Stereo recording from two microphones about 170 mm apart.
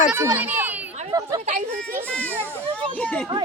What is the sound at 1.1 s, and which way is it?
Speech, 25° right (ahead or behind).